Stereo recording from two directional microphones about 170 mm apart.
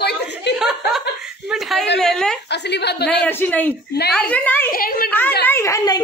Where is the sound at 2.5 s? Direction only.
85° left.